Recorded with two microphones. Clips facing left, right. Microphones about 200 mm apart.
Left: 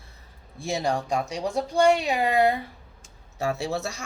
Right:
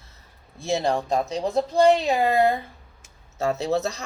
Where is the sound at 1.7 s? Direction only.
35° right (ahead or behind).